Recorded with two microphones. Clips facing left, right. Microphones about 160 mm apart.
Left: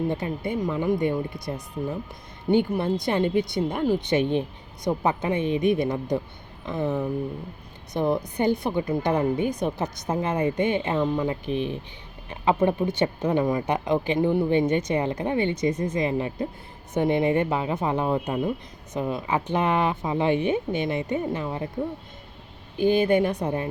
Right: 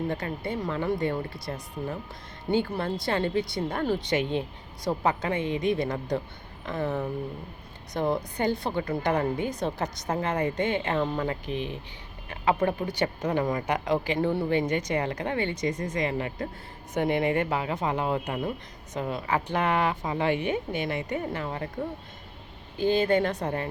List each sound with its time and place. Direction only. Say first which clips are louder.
0.1 s a woman's voice: left 3 dB; 20° left (ahead or behind)
22.8 s speech: left 3 dB; 15° left (ahead or behind)